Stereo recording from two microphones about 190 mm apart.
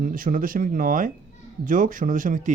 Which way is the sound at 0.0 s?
45° right (ahead or behind).